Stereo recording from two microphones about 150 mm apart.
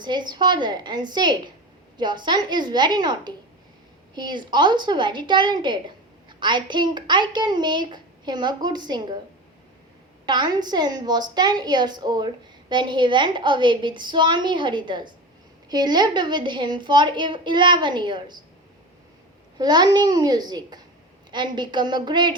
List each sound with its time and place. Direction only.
0.0 s a child's voice: 30° right (ahead or behind)
10.2 s a woman's voice: 30° right (ahead or behind)
19.5 s a child's voice: 30° right (ahead or behind)